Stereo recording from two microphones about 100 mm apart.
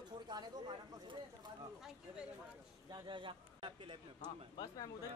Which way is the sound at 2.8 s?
50° right (ahead or behind).